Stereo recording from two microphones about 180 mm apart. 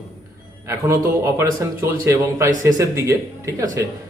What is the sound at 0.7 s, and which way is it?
A man's voice, 15° right (ahead or behind).